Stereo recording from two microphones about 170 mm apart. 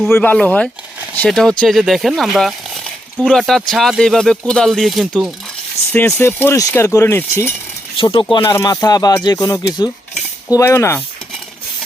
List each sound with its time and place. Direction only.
0.1 s speech: 10° left (ahead or behind)
5.9 s speech: 10° left (ahead or behind)
7.9 s speech: 30° left (ahead or behind)